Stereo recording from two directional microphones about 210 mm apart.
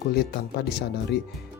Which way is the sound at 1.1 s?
55° left (ahead or behind).